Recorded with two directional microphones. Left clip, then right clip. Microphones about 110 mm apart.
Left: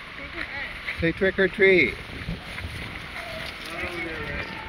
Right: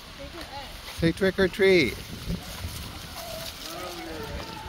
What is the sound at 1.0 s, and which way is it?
Speech, 65° right (ahead or behind).